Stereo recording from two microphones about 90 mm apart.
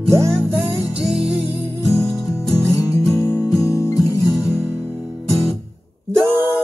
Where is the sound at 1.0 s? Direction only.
5° right (ahead or behind).